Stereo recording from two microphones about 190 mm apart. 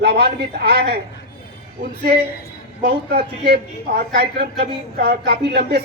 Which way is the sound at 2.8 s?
55° right (ahead or behind).